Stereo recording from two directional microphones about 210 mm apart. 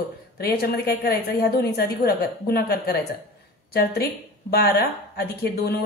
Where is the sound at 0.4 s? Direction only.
45° left (ahead or behind).